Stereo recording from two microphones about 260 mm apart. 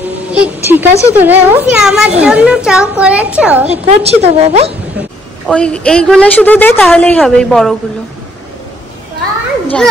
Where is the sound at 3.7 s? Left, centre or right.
Right.